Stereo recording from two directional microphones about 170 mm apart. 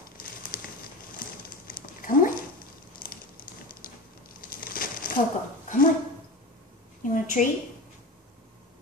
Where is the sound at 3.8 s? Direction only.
55° left (ahead or behind).